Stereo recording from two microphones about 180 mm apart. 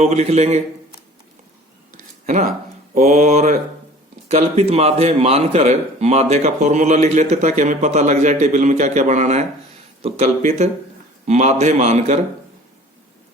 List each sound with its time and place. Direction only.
0.0 s a man's voice: 40° right (ahead or behind)
2.0 s a sound: 45° right (ahead or behind)
2.9 s a man's voice: 40° right (ahead or behind)